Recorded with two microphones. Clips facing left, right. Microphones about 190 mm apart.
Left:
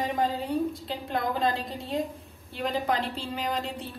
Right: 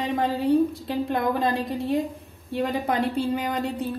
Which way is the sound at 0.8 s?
60° right (ahead or behind).